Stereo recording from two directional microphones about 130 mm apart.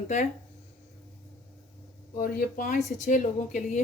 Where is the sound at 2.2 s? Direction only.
90° left.